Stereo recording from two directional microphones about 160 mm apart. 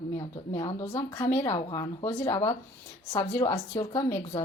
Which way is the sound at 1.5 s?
30° left (ahead or behind).